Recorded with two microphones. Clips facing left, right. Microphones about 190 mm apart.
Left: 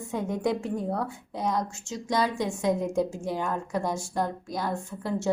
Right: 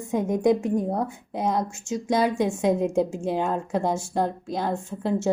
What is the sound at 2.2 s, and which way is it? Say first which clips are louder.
Speech: right 4 dB; 55° right (ahead or behind).